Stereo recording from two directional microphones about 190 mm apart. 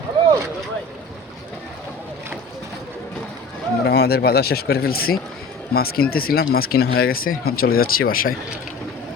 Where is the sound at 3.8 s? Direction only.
60° left (ahead or behind).